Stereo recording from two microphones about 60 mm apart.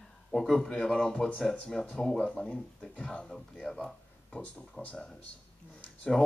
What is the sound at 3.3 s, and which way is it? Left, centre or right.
Speech, centre.